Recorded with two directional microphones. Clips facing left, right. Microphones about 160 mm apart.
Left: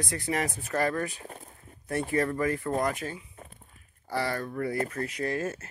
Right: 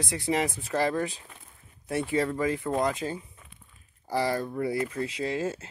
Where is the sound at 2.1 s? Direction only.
10° right (ahead or behind).